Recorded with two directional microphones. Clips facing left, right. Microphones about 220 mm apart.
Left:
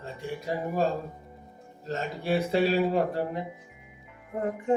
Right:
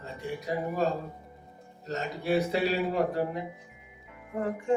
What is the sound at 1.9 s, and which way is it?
Speech, 30° left (ahead or behind).